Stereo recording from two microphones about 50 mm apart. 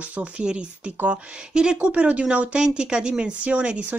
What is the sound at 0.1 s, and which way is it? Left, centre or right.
Speech, right.